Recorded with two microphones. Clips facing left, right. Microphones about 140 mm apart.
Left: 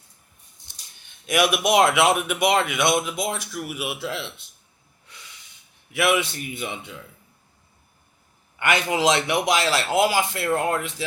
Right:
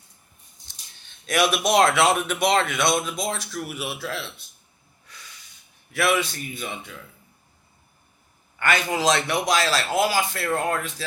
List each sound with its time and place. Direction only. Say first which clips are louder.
1.3 s a man's voice: left 1 dB; 10° left (ahead or behind)
5.9 s a man's voice: left 1 dB; 20° left (ahead or behind)
8.5 s a man's voice: left 1 dB; 15° left (ahead or behind)